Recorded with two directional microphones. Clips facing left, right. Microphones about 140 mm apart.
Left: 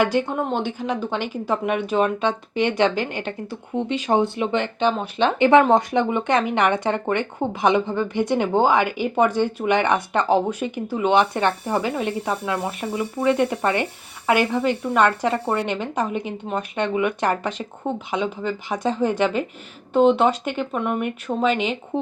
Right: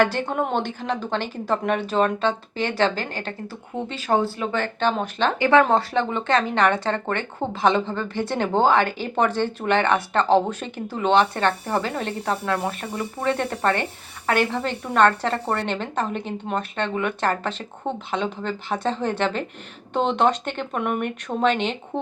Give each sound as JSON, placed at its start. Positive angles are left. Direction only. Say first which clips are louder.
{"t": 0.3, "sound": "speech", "louder": "even", "side_deg": 10}
{"t": 20.7, "sound": "speech", "louder": "right 1 dB", "side_deg": -5}
{"t": 21.0, "sound": "speech", "louder": "even", "side_deg": 5}